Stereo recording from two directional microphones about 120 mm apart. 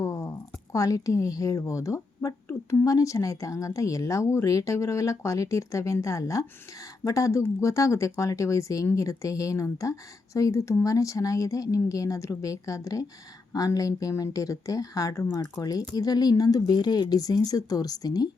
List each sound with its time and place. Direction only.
0.0 s a woman's voice: 25° left (ahead or behind)